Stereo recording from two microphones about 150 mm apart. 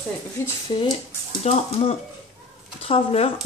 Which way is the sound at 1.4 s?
45° left (ahead or behind).